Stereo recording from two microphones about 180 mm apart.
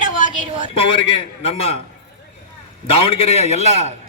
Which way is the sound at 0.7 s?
30° left (ahead or behind).